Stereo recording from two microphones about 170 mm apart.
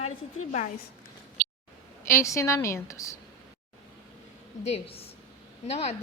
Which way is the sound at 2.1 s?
15° left (ahead or behind).